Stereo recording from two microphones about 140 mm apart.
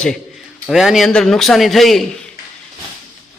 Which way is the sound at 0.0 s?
Centre (ahead or behind).